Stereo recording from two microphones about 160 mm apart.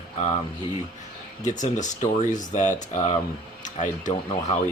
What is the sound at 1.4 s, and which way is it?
Speech, 50° left (ahead or behind).